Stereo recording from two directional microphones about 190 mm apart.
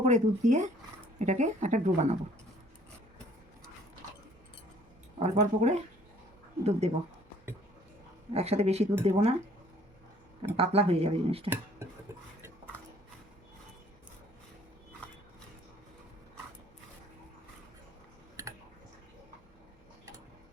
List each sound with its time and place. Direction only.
0.0 s a woman's voice: 40° right (ahead or behind)
5.2 s a woman's voice: 35° right (ahead or behind)
8.3 s a woman's voice: 35° right (ahead or behind)
10.6 s a woman's voice: 30° right (ahead or behind)
11.4 s speech: 10° right (ahead or behind)